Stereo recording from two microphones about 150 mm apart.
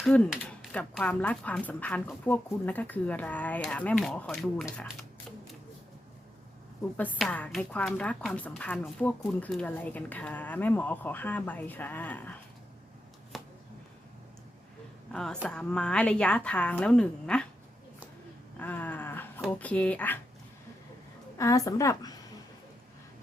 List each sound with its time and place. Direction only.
0.0 s a woman's voice: 5° left (ahead or behind)
6.9 s a woman's voice: 10° left (ahead or behind)
13.3 s a sound: centre (ahead or behind)
15.1 s a woman's voice: 5° left (ahead or behind)
18.6 s a sound: 10° left (ahead or behind)
19.5 s a woman's voice: 10° left (ahead or behind)
21.3 s a woman's voice: 20° left (ahead or behind)